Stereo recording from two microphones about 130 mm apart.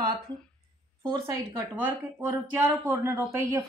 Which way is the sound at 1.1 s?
25° right (ahead or behind).